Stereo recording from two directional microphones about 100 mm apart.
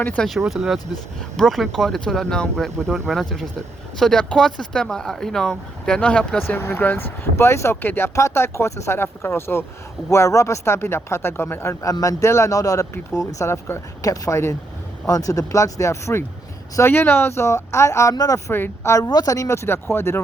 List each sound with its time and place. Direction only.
0.2 s speech: centre (ahead or behind); by 11.7 s 20° left (ahead or behind)
11.7 s speech: 35° left (ahead or behind)
18.5 s speech: 25° left (ahead or behind)
19.0 s speech: 40° left (ahead or behind)